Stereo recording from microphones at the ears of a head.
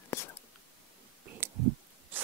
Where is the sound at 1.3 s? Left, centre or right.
Right.